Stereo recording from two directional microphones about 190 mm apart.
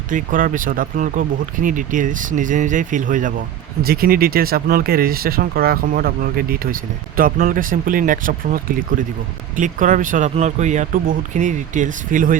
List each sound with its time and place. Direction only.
0.1 s speech: 45° right (ahead or behind)